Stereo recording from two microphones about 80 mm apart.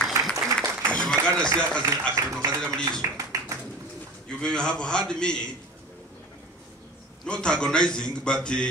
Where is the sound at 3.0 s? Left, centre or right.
Right.